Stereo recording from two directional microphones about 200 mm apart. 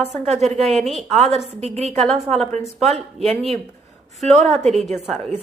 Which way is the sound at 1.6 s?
30° right (ahead or behind).